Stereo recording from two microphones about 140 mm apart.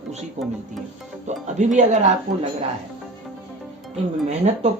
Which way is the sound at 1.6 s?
60° right (ahead or behind).